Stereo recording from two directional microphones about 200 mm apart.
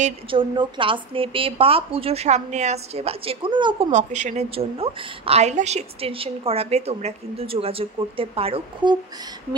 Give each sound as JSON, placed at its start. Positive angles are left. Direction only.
{"t": 0.0, "sound": "a woman's voice", "side_deg": -25}
{"t": 3.9, "sound": "a woman's voice", "side_deg": -35}